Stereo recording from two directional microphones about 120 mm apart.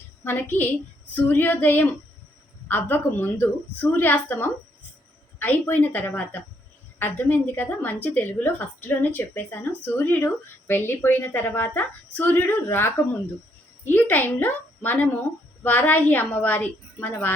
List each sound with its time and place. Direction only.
0.3 s speech: 15° left (ahead or behind)